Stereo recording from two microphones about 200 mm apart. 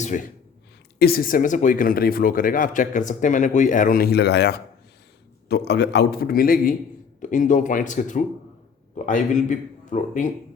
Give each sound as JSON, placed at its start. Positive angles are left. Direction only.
{"t": 0.0, "sound": "speech", "side_deg": 40}
{"t": 0.9, "sound": "speech", "side_deg": 50}